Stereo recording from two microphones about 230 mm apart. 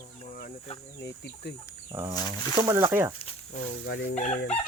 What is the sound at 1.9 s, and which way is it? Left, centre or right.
Speech, centre.